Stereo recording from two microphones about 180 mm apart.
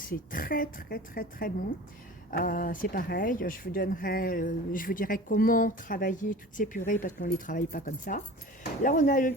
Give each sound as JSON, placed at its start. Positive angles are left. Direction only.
{"t": 0.0, "sound": "speech", "side_deg": 50}